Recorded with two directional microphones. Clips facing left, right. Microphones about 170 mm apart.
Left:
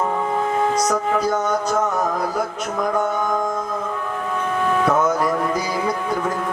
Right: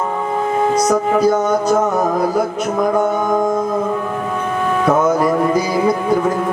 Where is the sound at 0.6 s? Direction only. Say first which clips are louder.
Right 7 dB; 5° right (ahead or behind).